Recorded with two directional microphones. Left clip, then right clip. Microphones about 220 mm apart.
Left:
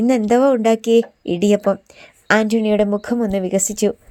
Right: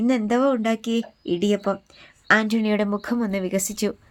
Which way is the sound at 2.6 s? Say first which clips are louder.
Left 7 dB; 10° left (ahead or behind).